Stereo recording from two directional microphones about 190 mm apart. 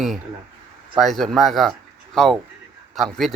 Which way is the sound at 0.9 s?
Centre (ahead or behind).